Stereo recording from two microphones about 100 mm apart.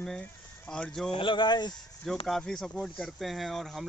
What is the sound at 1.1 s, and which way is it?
Speech, 55° left (ahead or behind).